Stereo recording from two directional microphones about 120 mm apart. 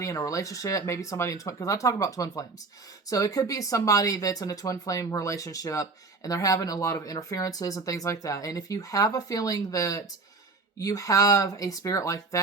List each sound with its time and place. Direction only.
0.0 s speech: 25° left (ahead or behind)